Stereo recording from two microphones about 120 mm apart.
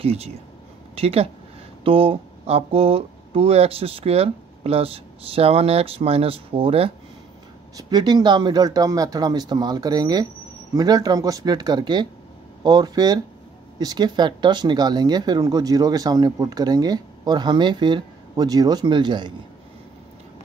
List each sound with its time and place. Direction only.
0.0 s speech: 60° right (ahead or behind)
7.7 s speech: 35° right (ahead or behind)